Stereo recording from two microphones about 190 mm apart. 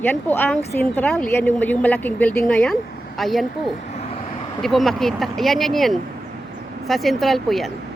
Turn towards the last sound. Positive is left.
turn(degrees=0)  # may be behind; listen again after turning